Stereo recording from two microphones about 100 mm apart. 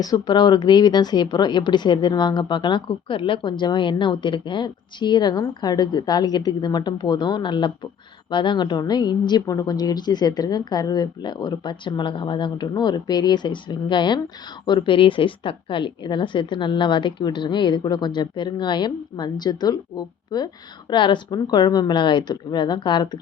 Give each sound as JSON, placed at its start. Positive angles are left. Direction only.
{"t": 0.0, "sound": "speech", "side_deg": 40}
{"t": 20.9, "sound": "speech", "side_deg": 55}